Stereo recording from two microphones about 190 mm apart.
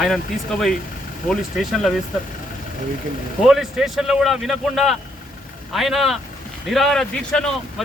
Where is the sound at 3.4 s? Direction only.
Centre (ahead or behind).